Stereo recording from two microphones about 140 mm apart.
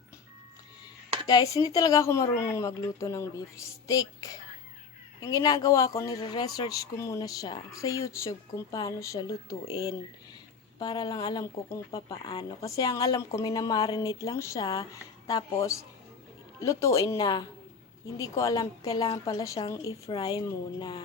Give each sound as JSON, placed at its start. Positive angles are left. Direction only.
{"t": 1.3, "sound": "speech", "side_deg": 25}